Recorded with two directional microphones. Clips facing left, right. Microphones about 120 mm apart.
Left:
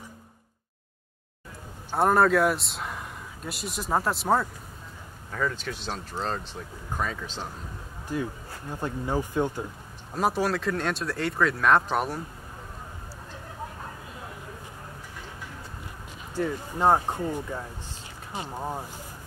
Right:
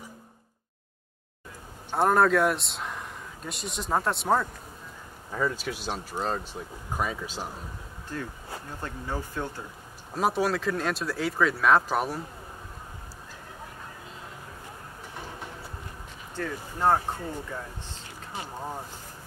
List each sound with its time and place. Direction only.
1.9 s a man's voice: centre (ahead or behind)
5.3 s speech: 10° right (ahead or behind)
8.1 s speech: 15° left (ahead or behind)
10.1 s speech: centre (ahead or behind)
16.3 s speech: 15° left (ahead or behind)